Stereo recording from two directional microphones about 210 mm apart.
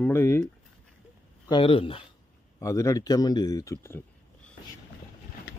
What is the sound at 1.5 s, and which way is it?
Speech, 25° left (ahead or behind).